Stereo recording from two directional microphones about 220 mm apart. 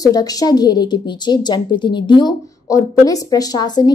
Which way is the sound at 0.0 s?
15° left (ahead or behind).